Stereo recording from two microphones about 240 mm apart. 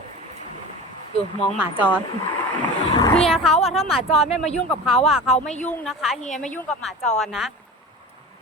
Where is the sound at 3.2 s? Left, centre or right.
Centre.